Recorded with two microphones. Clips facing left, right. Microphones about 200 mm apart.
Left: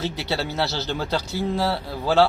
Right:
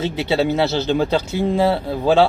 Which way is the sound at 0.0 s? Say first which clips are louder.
Right 8 dB; 20° right (ahead or behind).